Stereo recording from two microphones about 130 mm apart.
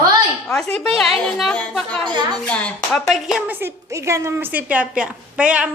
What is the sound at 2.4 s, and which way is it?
Speech, 10° left (ahead or behind).